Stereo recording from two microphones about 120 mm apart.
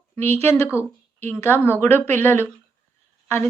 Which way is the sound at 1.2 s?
20° left (ahead or behind).